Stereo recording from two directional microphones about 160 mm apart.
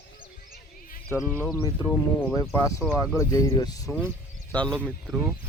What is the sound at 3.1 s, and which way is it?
Speech, 20° left (ahead or behind).